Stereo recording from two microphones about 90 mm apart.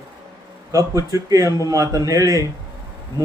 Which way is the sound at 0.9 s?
40° right (ahead or behind).